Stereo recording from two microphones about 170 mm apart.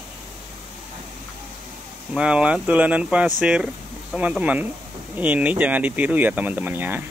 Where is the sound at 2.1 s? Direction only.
5° right (ahead or behind).